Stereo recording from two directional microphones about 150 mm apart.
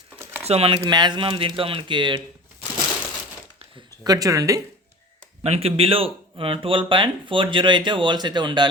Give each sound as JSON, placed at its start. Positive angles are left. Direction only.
{"t": 0.4, "sound": "speech", "side_deg": -40}
{"t": 0.8, "sound": "speech", "side_deg": -30}
{"t": 4.0, "sound": "speech", "side_deg": -25}
{"t": 5.4, "sound": "speech", "side_deg": -40}